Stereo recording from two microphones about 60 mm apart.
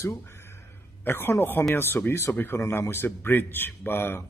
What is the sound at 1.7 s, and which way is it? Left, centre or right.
Speech, left.